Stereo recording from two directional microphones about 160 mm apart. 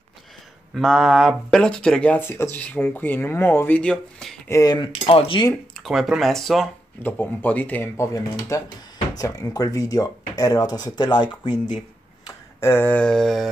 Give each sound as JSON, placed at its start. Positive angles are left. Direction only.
{"t": 0.7, "sound": "speech", "side_deg": 0}
{"t": 4.5, "sound": "speech", "side_deg": 20}
{"t": 5.8, "sound": "speech", "side_deg": 0}
{"t": 12.3, "sound": "speech", "side_deg": 15}